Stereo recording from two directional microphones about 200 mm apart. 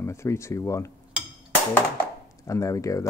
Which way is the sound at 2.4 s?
15° left (ahead or behind).